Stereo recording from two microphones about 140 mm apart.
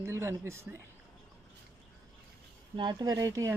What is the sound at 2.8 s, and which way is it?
Speech, 30° right (ahead or behind).